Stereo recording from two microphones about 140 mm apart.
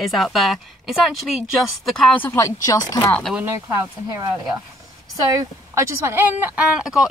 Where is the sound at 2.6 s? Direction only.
25° left (ahead or behind).